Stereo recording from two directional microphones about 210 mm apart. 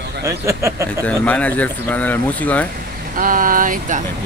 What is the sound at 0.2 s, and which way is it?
Speech, 15° right (ahead or behind).